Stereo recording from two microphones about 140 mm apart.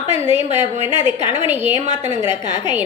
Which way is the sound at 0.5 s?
55° right (ahead or behind).